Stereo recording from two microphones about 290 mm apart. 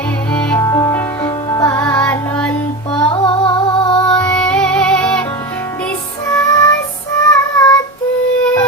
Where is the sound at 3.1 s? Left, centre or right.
Centre.